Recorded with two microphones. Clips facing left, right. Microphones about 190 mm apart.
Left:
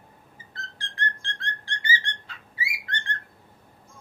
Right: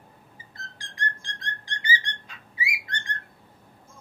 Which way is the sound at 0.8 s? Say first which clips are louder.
Left 1 dB; 15° right (ahead or behind).